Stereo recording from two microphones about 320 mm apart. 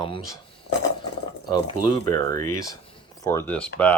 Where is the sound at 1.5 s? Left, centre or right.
Centre.